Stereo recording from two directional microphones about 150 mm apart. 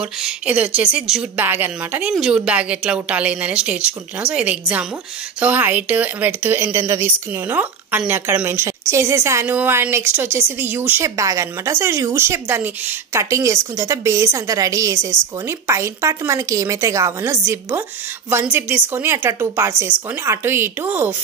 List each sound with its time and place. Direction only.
0.0 s speech: 5° right (ahead or behind)